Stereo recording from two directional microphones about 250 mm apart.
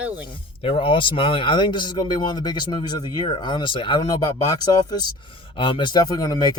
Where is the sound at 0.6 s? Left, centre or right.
Left.